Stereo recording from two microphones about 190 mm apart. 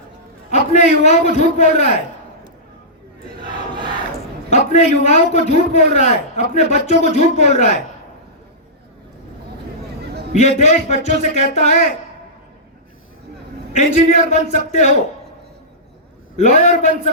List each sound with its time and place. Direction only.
0.5 s a man's voice: 35° left (ahead or behind)
4.5 s a man's voice: 35° left (ahead or behind)
10.3 s a man's voice: 35° left (ahead or behind)
13.7 s a man's voice: 35° left (ahead or behind)
16.4 s a man's voice: 35° left (ahead or behind)